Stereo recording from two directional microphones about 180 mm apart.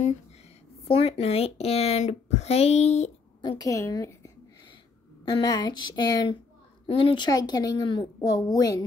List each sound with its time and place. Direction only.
0.8 s speech: 35° left (ahead or behind)
3.3 s a woman's voice: 25° left (ahead or behind)
5.3 s a woman's voice: 25° left (ahead or behind)